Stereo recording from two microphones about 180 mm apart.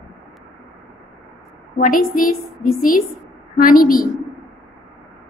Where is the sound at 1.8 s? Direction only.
50° left (ahead or behind).